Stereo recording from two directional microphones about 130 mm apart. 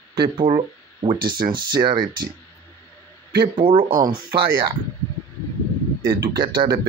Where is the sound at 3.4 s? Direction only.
40° right (ahead or behind).